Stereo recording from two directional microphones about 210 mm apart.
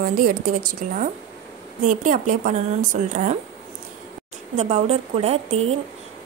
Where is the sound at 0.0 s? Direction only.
45° right (ahead or behind).